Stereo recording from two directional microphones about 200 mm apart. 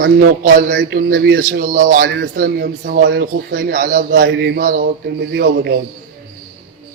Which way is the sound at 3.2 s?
55° right (ahead or behind).